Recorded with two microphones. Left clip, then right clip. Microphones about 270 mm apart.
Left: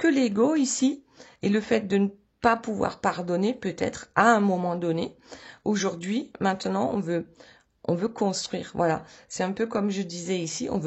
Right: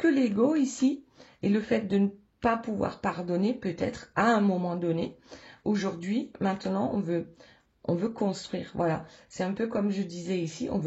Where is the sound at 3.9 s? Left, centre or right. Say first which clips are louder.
Left 6 dB; centre.